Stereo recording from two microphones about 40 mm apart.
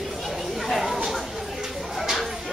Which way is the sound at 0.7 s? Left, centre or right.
Centre.